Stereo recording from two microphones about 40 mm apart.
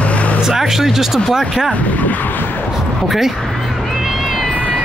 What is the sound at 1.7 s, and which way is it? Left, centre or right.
Speech, left.